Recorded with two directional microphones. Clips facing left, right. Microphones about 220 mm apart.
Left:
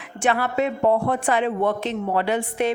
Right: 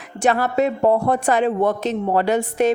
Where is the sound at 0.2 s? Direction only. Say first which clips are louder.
Right 4 dB; 40° right (ahead or behind).